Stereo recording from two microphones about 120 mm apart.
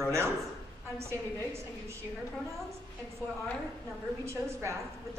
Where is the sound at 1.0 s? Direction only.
25° right (ahead or behind).